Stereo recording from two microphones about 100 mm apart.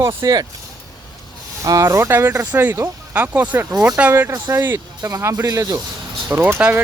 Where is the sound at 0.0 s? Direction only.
35° right (ahead or behind).